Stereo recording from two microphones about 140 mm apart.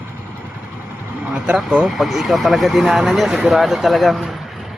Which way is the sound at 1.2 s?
10° right (ahead or behind).